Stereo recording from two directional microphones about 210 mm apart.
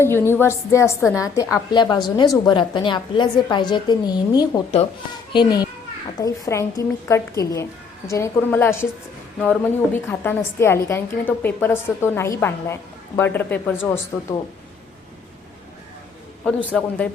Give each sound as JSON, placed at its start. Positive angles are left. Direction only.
{"t": 0.0, "sound": "a woman's voice", "side_deg": 10}
{"t": 16.7, "sound": "a man's voice", "side_deg": 5}